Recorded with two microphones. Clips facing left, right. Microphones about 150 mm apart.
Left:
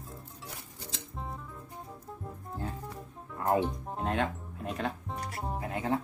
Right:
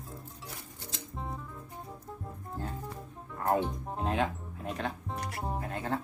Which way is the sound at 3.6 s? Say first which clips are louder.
Left 1 dB; centre (ahead or behind).